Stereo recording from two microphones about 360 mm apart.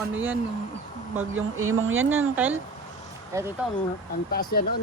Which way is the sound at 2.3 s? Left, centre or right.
Centre.